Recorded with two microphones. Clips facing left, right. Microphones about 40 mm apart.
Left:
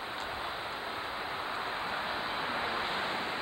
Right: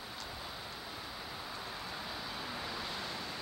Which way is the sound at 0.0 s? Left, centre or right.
Left.